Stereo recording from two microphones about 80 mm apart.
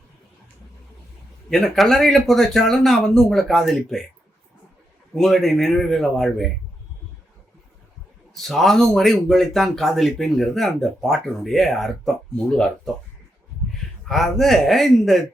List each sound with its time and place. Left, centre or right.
1.5 s speech: centre
5.1 s speech: centre
8.3 s speech: centre
14.0 s speech: centre